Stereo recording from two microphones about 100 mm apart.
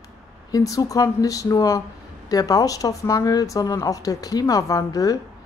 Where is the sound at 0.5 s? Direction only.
35° left (ahead or behind).